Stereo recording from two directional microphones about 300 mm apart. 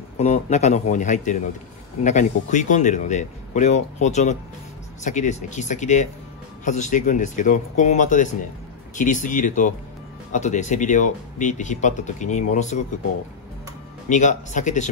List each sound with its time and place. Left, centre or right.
0.2 s speech: left
14.0 s speech: left